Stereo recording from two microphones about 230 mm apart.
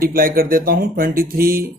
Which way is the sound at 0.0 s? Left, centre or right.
Right.